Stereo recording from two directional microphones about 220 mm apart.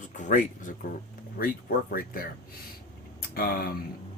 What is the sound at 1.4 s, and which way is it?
Speech, 40° left (ahead or behind).